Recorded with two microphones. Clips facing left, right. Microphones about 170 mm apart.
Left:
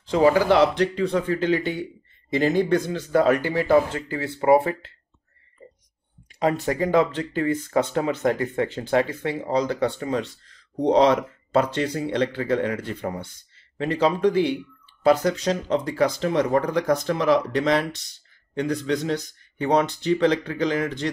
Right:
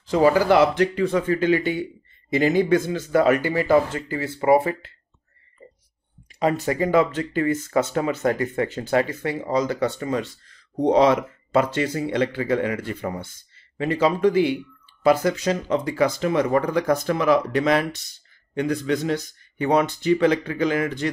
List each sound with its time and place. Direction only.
0.3 s speech: 5° right (ahead or behind)
6.6 s speech: 5° right (ahead or behind)